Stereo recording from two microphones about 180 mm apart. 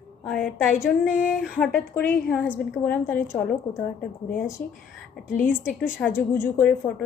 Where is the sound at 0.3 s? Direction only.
Centre (ahead or behind).